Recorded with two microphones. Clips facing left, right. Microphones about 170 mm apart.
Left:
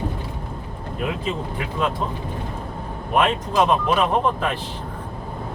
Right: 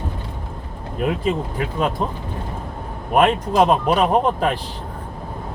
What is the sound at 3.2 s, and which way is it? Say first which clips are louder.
Speech: right 4 dB; 45° right (ahead or behind).